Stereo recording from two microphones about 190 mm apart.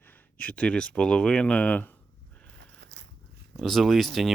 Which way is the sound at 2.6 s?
65° right (ahead or behind).